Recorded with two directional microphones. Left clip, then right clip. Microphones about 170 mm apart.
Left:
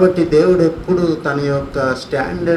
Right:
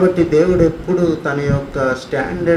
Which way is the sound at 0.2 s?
60° left (ahead or behind).